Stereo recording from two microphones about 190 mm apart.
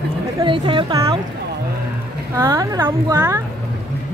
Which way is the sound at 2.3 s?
15° right (ahead or behind).